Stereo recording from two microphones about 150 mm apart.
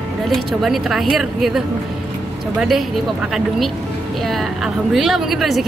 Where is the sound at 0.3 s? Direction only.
Centre (ahead or behind).